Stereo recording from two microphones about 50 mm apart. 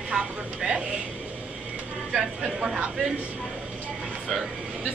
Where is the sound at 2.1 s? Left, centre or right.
Centre.